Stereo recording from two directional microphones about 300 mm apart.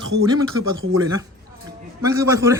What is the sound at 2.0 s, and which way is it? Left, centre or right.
Speech, centre.